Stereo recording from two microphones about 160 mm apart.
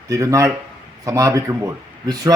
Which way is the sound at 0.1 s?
20° right (ahead or behind).